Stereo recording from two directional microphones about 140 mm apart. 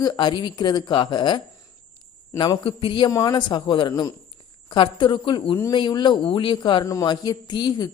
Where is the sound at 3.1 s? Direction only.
25° left (ahead or behind).